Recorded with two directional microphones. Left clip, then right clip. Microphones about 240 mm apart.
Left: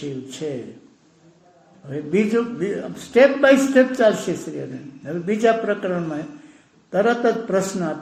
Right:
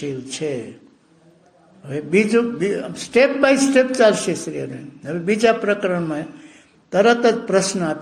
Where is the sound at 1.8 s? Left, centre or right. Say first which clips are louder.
Right 3 dB; right.